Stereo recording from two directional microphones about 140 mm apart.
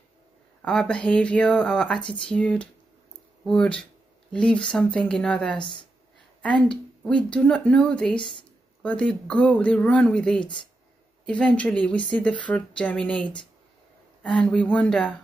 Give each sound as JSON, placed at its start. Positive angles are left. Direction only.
{"t": 0.6, "sound": "speech", "side_deg": 5}
{"t": 5.6, "sound": "speech", "side_deg": 35}
{"t": 6.4, "sound": "speech", "side_deg": 5}